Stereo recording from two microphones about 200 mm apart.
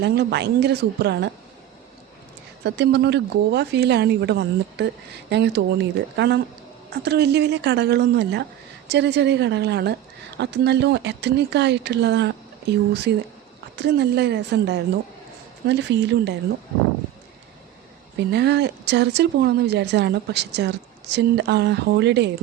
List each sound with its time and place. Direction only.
0.0 s a woman's voice: 55° right (ahead or behind)
2.6 s a woman's voice: 60° right (ahead or behind)
13.7 s a woman's voice: 55° right (ahead or behind)
18.3 s a woman's voice: 55° right (ahead or behind)